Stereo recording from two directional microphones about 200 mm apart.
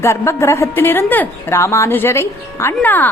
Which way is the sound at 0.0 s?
15° left (ahead or behind).